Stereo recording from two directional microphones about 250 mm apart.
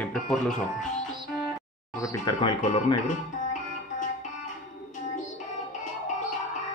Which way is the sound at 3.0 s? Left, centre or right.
Left.